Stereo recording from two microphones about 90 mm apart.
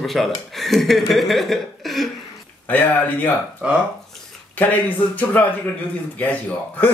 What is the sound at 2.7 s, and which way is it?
Speech, 20° left (ahead or behind).